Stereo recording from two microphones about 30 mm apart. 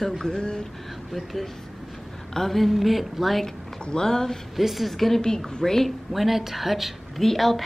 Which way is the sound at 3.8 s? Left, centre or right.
Left.